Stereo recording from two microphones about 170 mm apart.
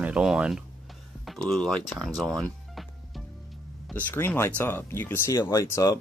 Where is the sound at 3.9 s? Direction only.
10° left (ahead or behind).